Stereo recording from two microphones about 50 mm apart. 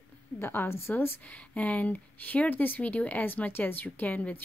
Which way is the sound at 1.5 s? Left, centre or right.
Left.